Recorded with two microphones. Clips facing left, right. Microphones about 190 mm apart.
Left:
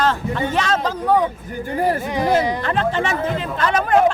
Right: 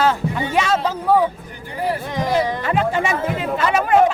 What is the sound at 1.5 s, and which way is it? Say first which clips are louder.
Speech: left 4 dB; 45° left (ahead or behind).